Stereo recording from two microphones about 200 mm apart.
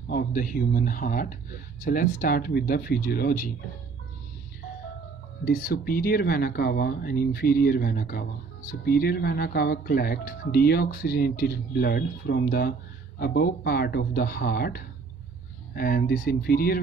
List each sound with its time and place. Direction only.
0.1 s speech: 45° left (ahead or behind)
5.4 s speech: 50° left (ahead or behind)